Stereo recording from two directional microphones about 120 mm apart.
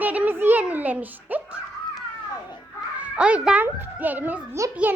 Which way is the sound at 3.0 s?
10° right (ahead or behind).